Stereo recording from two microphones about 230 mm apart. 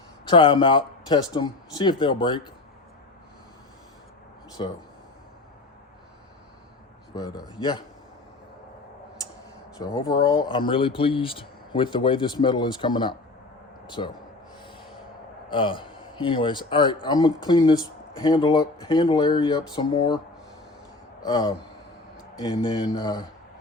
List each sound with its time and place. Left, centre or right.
0.3 s speech: left
7.1 s speech: centre
9.7 s a man's voice: centre
15.4 s speech: left
21.2 s speech: centre